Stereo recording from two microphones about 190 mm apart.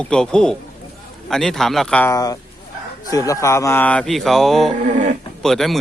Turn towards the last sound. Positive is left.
turn(degrees=0)  # may be behind; listen again after turning